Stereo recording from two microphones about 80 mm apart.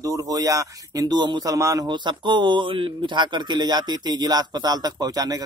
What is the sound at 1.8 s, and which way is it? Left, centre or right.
Speech, right.